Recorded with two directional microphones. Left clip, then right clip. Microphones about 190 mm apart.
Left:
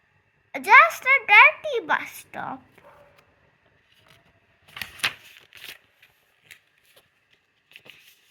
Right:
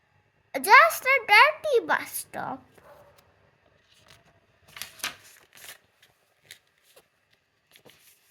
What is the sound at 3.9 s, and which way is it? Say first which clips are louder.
Vehicle: even; 25° right (ahead or behind).